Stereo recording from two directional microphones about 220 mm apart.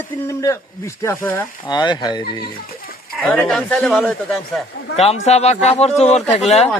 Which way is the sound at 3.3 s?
5° left (ahead or behind).